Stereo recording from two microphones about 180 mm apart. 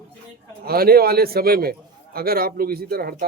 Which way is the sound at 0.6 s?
55° right (ahead or behind).